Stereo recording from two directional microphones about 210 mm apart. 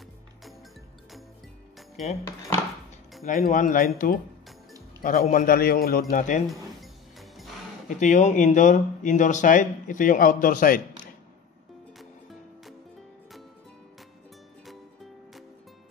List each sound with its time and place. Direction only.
3.3 s a man's voice: 35° left (ahead or behind)
6.8 s music: centre (ahead or behind)
8.0 s speech: 35° left (ahead or behind)
12.0 s music: centre (ahead or behind)